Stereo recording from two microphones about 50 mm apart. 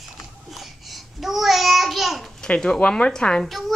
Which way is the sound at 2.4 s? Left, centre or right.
Centre.